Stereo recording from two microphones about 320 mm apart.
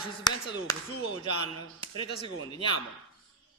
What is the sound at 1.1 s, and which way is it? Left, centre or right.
Speech, right.